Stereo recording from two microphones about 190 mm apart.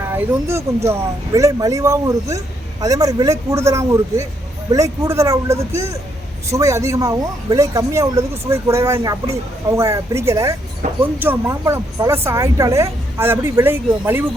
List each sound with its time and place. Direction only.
0.0 s speech: 15° right (ahead or behind)
10.8 s speech: 40° right (ahead or behind)
11.2 s speech: 15° right (ahead or behind)